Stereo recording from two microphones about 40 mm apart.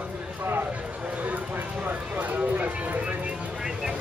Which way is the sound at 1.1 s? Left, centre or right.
Right.